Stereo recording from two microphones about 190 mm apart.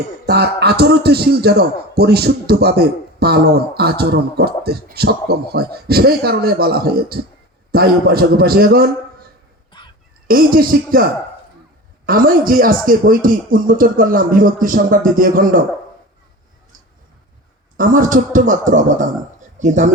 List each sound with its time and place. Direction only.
0.3 s a man's voice: 60° right (ahead or behind)
9.7 s honk: 25° left (ahead or behind)
10.2 s speech: 50° right (ahead or behind)
12.0 s speech: 50° right (ahead or behind)
17.7 s speech: 45° right (ahead or behind)